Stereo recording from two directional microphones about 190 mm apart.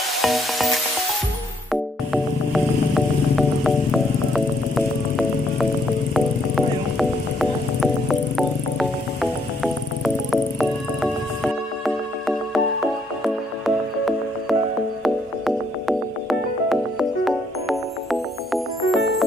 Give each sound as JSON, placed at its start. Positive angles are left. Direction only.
{"t": 0.2, "sound": "music", "side_deg": 0}
{"t": 2.5, "sound": "music", "side_deg": 0}
{"t": 17.2, "sound": "music", "side_deg": 0}